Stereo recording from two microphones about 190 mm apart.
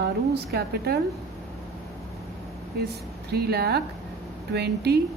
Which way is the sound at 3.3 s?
55° right (ahead or behind).